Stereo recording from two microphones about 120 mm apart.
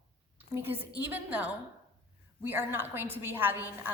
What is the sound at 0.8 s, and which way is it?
A woman's voice, 15° right (ahead or behind).